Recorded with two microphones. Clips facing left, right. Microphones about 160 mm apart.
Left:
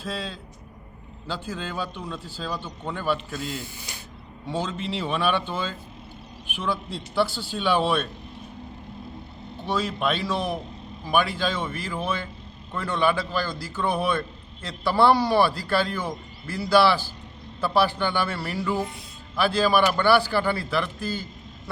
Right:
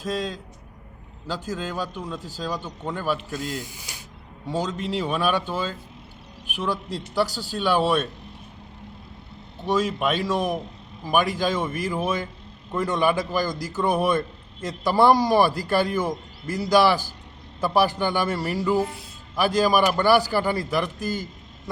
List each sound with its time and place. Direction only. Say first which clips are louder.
0.0 s speech: right 5 dB; 10° right (ahead or behind)
7.1 s speech: even; 10° right (ahead or behind)
9.6 s speech: right 3 dB; 10° right (ahead or behind)